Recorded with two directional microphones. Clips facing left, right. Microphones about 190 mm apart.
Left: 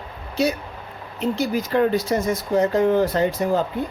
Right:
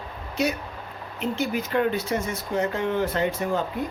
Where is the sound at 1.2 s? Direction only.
35° left (ahead or behind).